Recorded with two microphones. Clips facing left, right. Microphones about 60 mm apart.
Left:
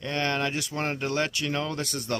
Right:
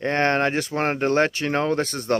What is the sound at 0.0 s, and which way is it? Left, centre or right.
Speech, right.